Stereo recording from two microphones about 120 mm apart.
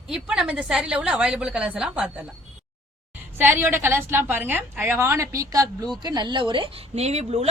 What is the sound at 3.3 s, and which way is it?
A woman's voice, 15° right (ahead or behind).